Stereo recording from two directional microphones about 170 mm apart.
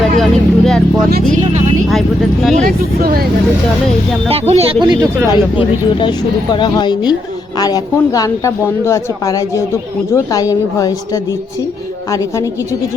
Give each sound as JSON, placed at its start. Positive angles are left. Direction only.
{"t": 0.2, "sound": "speech", "side_deg": 0}
{"t": 1.9, "sound": "speech", "side_deg": 0}
{"t": 2.6, "sound": "speech", "side_deg": -60}
{"t": 4.3, "sound": "speech", "side_deg": -35}
{"t": 5.3, "sound": "a woman's voice", "side_deg": 25}